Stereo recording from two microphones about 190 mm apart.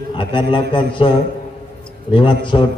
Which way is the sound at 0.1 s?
25° left (ahead or behind).